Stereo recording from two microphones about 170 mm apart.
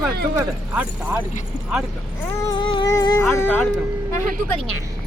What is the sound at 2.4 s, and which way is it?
Speech, 30° left (ahead or behind).